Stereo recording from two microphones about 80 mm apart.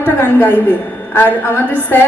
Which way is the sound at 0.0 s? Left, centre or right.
Left.